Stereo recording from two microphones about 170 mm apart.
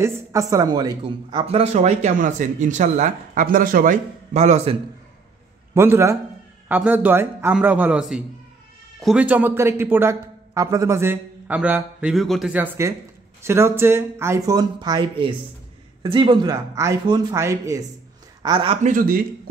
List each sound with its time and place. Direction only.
0.0 s speech: 20° right (ahead or behind); by 4.7 s 40° right (ahead or behind)
5.8 s a man's voice: 15° right (ahead or behind)
18.8 s speech: 50° right (ahead or behind)